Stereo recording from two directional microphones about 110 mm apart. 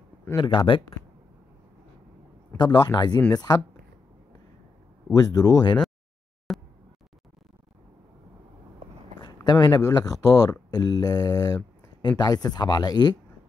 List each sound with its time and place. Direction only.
0.4 s speech: 50° left (ahead or behind)
2.5 s speech: 40° left (ahead or behind)
5.1 s speech: 35° left (ahead or behind)
6.5 s a sound: centre (ahead or behind)
9.2 s speech: 40° left (ahead or behind)